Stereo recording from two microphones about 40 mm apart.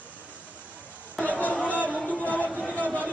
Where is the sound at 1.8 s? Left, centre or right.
Left.